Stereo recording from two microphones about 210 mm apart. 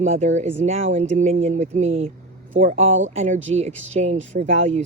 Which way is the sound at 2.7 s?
65° right (ahead or behind).